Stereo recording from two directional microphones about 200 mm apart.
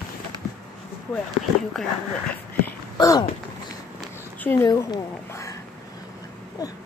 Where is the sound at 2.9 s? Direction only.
15° left (ahead or behind).